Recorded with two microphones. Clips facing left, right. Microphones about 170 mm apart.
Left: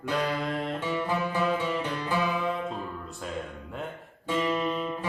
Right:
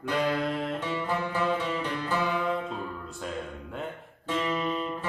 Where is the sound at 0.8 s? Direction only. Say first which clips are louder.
Left 1 dB; 10° left (ahead or behind).